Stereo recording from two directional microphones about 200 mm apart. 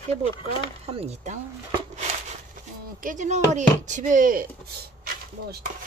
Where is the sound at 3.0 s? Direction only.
40° right (ahead or behind).